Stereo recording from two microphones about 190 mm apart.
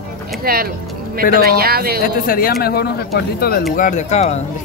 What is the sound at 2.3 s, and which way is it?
Speech, 50° left (ahead or behind).